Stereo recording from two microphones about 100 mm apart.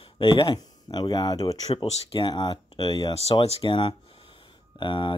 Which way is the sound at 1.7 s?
65° left (ahead or behind).